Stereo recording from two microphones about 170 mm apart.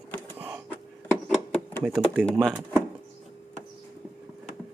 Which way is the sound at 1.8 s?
Centre (ahead or behind).